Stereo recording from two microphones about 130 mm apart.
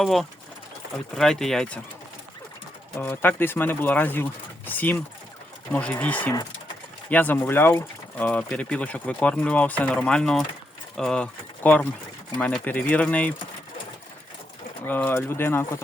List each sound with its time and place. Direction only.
0.0 s speech: centre (ahead or behind)
3.0 s speech: 15° left (ahead or behind)
14.8 s speech: 15° left (ahead or behind)